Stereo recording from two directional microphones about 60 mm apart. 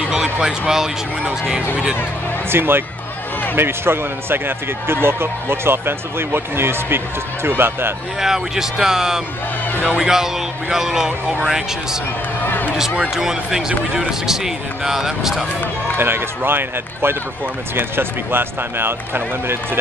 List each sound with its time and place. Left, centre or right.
0.1 s speech: centre
2.5 s speech: right
8.2 s speech: centre
12.4 s a sound: left
12.9 s speech: centre
16.0 s speech: right